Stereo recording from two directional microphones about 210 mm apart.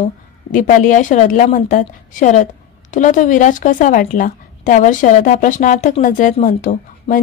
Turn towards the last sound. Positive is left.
turn(degrees=40)  # may be behind; listen again after turning